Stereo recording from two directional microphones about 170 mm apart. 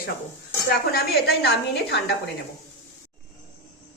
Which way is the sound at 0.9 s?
75° left (ahead or behind).